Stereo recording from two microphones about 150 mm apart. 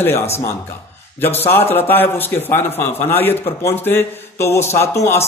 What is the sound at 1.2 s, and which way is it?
Speech, 15° left (ahead or behind).